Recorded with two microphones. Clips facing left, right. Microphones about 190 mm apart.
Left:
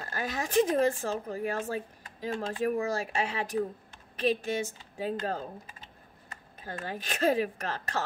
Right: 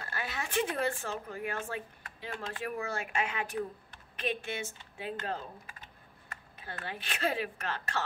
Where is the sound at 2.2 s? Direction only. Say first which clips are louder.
Left 8 dB; 40° left (ahead or behind).